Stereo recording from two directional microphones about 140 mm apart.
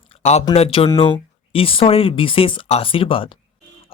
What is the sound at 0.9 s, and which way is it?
Speech, 40° left (ahead or behind).